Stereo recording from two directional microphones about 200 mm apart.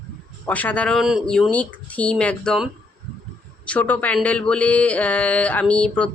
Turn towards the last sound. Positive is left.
turn(degrees=5)  # may be behind; listen again after turning